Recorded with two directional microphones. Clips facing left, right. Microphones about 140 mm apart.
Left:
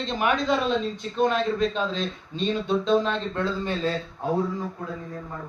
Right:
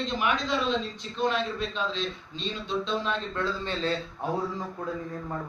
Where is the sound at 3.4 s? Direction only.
10° left (ahead or behind).